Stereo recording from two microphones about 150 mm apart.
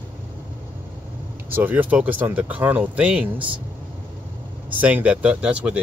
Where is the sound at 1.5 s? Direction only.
15° right (ahead or behind).